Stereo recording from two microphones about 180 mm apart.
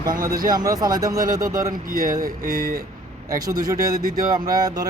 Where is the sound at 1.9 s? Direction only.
50° right (ahead or behind).